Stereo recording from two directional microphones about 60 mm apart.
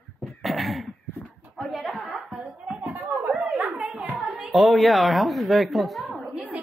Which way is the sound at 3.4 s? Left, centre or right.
Centre.